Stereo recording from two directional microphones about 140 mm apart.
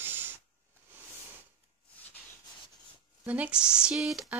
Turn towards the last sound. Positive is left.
turn(degrees=-5)  # may be behind; listen again after turning